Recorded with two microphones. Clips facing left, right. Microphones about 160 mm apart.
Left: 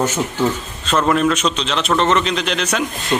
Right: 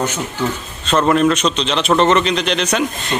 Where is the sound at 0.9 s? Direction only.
Centre (ahead or behind).